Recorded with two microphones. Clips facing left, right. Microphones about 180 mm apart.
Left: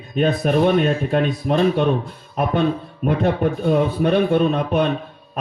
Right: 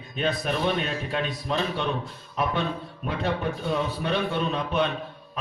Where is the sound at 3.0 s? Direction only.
50° left (ahead or behind).